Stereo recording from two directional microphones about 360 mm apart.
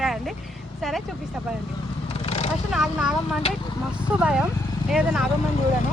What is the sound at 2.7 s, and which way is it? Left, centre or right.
Speech, centre.